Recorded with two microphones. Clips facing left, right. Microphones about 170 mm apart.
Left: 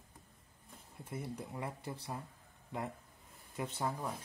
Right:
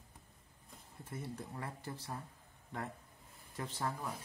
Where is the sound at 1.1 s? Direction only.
20° left (ahead or behind).